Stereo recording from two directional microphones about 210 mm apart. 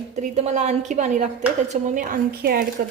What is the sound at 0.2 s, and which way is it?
A woman's voice, 35° right (ahead or behind).